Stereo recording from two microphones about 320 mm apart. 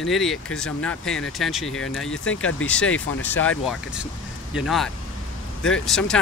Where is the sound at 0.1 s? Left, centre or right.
Centre.